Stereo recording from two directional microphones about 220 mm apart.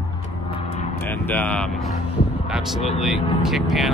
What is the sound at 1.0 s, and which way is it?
Speech, 10° left (ahead or behind).